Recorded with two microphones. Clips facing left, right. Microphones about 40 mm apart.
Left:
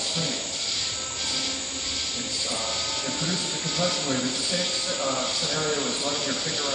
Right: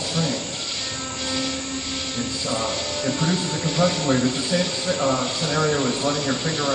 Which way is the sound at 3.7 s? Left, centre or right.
Right.